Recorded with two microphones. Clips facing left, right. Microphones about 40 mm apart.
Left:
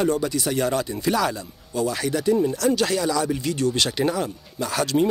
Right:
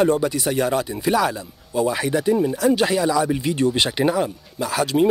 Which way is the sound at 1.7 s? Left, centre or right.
Right.